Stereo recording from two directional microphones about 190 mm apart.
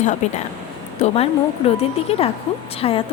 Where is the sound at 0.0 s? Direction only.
40° left (ahead or behind).